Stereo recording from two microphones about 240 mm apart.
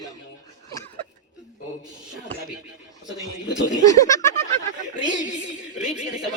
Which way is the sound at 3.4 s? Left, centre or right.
Left.